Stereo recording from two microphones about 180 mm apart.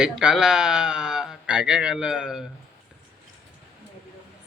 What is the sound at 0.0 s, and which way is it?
Speech, 5° right (ahead or behind).